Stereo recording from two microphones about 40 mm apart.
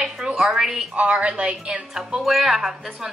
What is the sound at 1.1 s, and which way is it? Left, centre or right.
Speech, right.